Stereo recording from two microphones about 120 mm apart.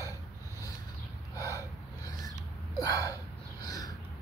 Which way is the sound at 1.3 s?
30° left (ahead or behind).